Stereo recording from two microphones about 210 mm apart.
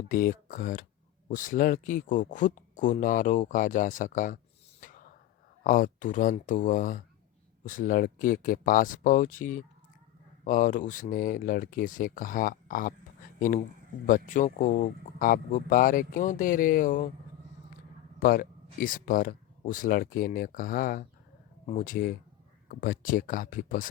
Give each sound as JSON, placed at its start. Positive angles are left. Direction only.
{"t": 0.1, "sound": "speech", "side_deg": 40}
{"t": 4.8, "sound": "a sound", "side_deg": 40}
{"t": 5.6, "sound": "speech", "side_deg": 40}
{"t": 14.1, "sound": "speech", "side_deg": 40}
{"t": 18.2, "sound": "speech", "side_deg": 45}